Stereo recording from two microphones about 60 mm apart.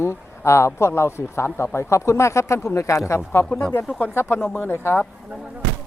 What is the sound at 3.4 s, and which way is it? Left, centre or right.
Speech, left.